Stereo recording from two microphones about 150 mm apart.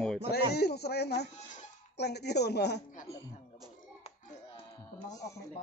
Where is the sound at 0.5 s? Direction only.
90° left.